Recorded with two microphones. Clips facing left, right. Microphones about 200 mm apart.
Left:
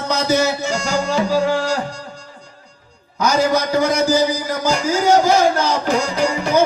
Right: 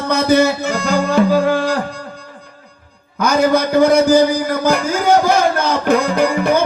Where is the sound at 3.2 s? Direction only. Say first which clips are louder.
Right 3 dB; 55° right (ahead or behind).